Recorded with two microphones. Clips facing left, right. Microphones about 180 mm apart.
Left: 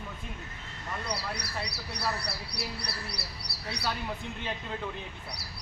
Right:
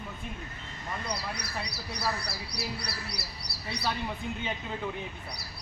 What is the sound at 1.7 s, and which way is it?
Speech, 65° left (ahead or behind).